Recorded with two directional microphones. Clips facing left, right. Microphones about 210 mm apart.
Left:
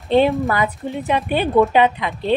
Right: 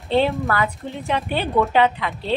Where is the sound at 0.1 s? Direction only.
15° left (ahead or behind).